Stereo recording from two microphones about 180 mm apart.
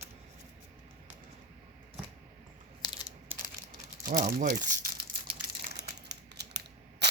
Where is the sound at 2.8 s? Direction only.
25° left (ahead or behind).